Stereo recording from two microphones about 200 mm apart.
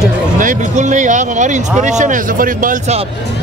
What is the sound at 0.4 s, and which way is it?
Speech, 40° right (ahead or behind).